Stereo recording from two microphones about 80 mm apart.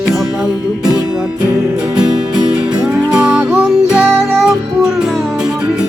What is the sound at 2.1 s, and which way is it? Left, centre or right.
Music, right.